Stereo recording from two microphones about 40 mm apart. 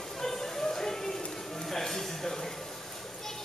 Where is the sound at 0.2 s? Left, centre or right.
Centre.